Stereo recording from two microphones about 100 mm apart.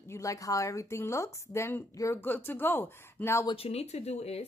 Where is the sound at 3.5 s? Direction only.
80° left.